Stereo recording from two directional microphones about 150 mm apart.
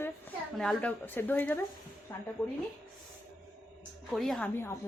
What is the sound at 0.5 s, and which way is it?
A woman's voice, 5° left (ahead or behind).